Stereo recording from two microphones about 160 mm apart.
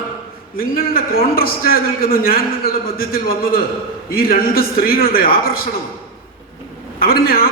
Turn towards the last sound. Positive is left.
turn(degrees=65)  # may be behind; listen again after turning